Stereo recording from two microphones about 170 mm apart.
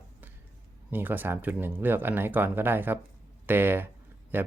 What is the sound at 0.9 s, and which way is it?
Speech, 10° right (ahead or behind).